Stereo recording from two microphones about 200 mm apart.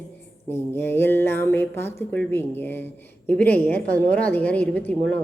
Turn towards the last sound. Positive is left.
turn(degrees=10)  # may be behind; listen again after turning